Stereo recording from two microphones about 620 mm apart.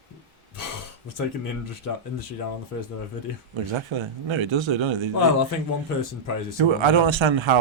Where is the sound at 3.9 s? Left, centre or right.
Right.